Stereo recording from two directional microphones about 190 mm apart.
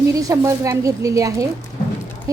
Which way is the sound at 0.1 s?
15° right (ahead or behind).